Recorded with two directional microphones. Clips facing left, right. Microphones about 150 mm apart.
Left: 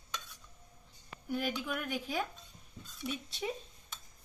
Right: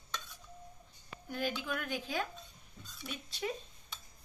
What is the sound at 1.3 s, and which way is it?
Speech, 10° left (ahead or behind).